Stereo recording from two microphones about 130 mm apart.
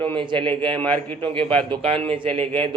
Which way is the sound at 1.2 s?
40° right (ahead or behind).